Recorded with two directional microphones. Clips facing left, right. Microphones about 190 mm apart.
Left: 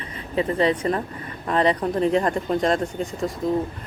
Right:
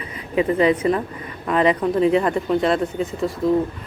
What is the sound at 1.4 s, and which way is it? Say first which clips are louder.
Speech: right 3 dB; 35° left (ahead or behind).